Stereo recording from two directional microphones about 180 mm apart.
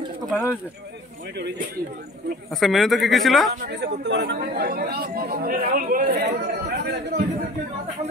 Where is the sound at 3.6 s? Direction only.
70° right (ahead or behind).